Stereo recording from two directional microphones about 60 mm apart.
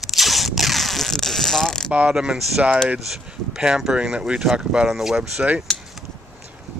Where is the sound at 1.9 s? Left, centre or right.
Right.